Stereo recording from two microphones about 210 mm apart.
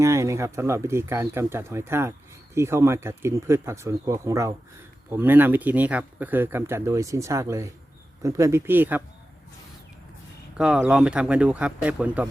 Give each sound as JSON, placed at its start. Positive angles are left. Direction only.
{"t": 0.0, "sound": "speech", "side_deg": -15}
{"t": 10.6, "sound": "speech", "side_deg": -5}